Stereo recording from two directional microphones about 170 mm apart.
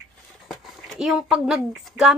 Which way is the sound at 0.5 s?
Centre (ahead or behind).